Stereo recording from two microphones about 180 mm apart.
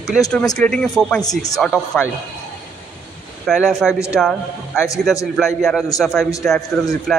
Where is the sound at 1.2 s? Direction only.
20° left (ahead or behind).